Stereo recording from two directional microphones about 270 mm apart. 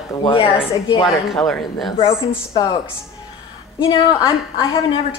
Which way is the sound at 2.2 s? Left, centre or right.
Centre.